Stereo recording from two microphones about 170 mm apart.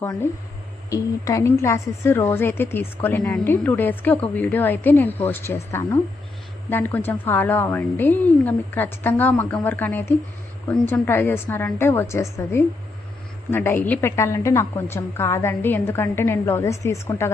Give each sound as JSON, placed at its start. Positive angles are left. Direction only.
{"t": 0.0, "sound": "a woman's voice", "side_deg": 20}